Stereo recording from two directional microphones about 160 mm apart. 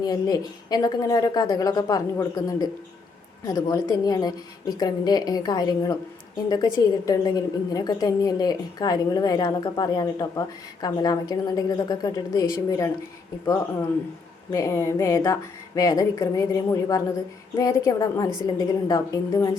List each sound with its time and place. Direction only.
0.0 s a woman's voice: 25° left (ahead or behind)